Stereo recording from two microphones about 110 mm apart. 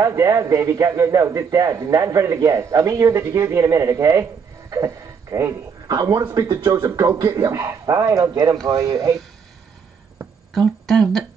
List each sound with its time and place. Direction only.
0.0 s a man's voice: 25° right (ahead or behind)
10.5 s speech: 5° left (ahead or behind)